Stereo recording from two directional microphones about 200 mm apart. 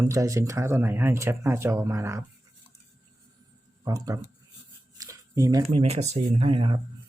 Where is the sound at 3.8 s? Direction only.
15° right (ahead or behind).